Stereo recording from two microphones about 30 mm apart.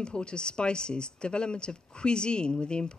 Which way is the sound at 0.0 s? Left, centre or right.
Left.